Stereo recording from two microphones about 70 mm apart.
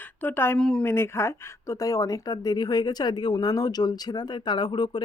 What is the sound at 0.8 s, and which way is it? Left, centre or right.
Speech, left.